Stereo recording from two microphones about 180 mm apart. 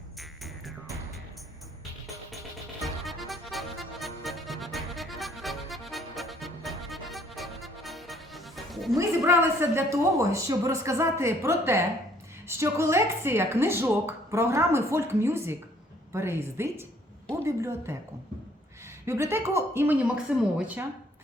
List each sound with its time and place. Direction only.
0.2 s music: centre (ahead or behind)
2.8 s music: centre (ahead or behind)
9.0 s a woman's voice: 15° right (ahead or behind)
19.0 s a woman's voice: 15° right (ahead or behind)